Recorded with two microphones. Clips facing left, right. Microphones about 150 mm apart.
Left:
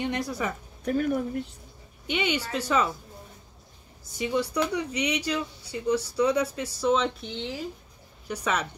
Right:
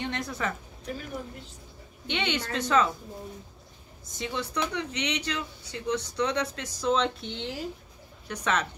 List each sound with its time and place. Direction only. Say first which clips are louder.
0.0 s a woman's voice: left 3 dB; 10° left (ahead or behind)
0.8 s speech: left 11 dB; 55° left (ahead or behind)
2.0 s speech: left 2 dB; 5° left (ahead or behind)
4.2 s speech: left 5 dB; 10° left (ahead or behind)